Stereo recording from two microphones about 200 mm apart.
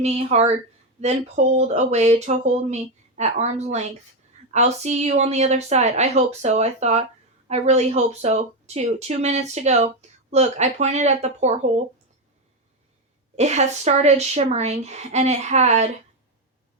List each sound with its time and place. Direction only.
0.0 s speech: 35° right (ahead or behind)
13.3 s speech: 35° right (ahead or behind)